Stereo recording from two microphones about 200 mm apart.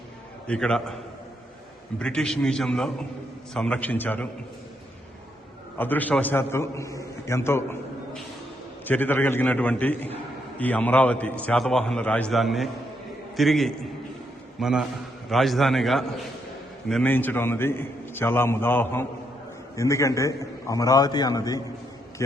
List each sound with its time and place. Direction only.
0.4 s a man's voice: 5° left (ahead or behind)
2.0 s a man's voice: 5° left (ahead or behind)
5.7 s a man's voice: 10° left (ahead or behind)
8.9 s a man's voice: 10° left (ahead or behind)